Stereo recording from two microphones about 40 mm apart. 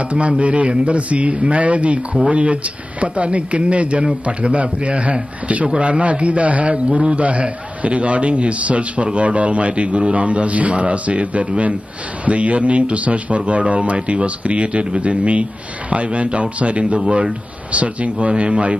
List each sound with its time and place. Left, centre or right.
0.0 s a man's voice: right
6.7 s a man's voice: right
17.0 s speech: centre
17.6 s a man's voice: right